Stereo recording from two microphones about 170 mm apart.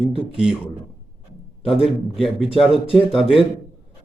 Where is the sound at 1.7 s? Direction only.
Centre (ahead or behind).